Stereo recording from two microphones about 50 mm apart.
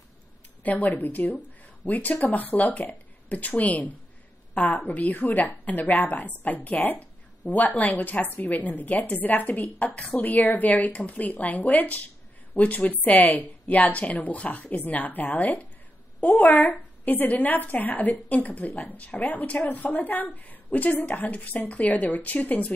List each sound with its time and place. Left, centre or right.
0.7 s a woman's voice: left